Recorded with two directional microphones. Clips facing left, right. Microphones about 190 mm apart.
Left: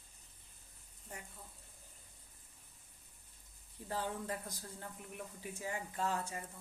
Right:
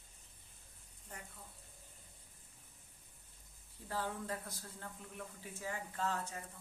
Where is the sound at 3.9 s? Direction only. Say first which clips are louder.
Left 1 dB; 15° left (ahead or behind).